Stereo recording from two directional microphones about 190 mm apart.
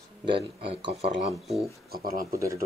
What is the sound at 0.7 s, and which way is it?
Speech, 25° right (ahead or behind).